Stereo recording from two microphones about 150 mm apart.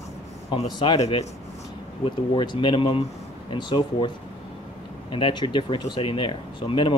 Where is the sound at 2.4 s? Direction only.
35° left (ahead or behind).